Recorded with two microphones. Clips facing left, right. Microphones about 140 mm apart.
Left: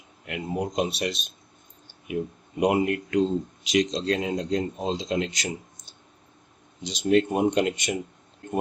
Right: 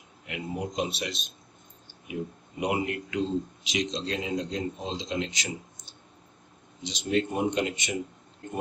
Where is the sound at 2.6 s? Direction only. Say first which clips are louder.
Left 6 dB; 55° left (ahead or behind).